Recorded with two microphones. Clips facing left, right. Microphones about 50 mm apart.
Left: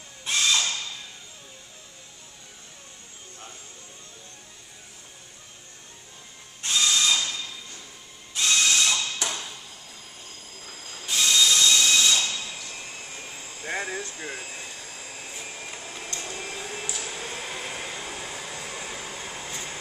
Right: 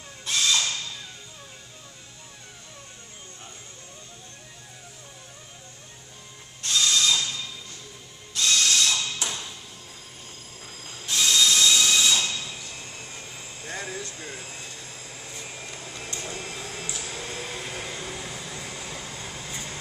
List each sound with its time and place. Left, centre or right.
0.2 s a sound: centre
6.6 s printer: centre
8.4 s printer: centre
11.1 s tools: centre
12.6 s vehicle: centre
13.6 s a sound: left
14.5 s vacuum cleaner: left
15.2 s vacuum cleaner: centre
15.8 s printer: centre
16.6 s a sound: centre
18.2 s vehicle: centre
19.2 s air conditioning: left